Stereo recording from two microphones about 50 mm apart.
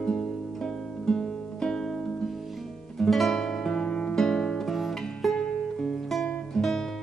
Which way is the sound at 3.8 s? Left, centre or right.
Left.